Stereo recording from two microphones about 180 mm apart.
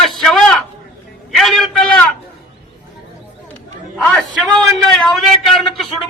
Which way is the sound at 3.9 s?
Centre (ahead or behind).